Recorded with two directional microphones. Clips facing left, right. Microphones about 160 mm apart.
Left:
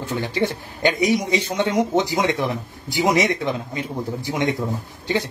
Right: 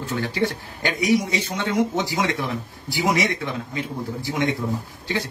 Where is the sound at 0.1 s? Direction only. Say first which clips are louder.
Left 1 dB; 20° left (ahead or behind).